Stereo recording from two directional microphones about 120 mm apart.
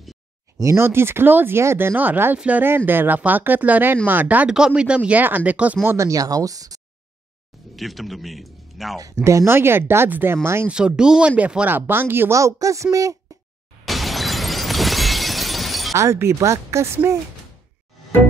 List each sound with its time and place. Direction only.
0.6 s speech: 25° right (ahead or behind)
5.9 s speech: 25° right (ahead or behind)
7.7 s a man's voice: centre (ahead or behind)
9.0 s speech: 25° right (ahead or behind)
10.7 s speech: 5° right (ahead or behind); by 13.1 s 25° right (ahead or behind)
13.8 s shatter: centre (ahead or behind)
15.9 s speech: 25° right (ahead or behind)